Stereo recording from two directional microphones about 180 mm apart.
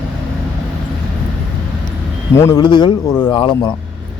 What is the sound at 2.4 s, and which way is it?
Speech, 20° left (ahead or behind).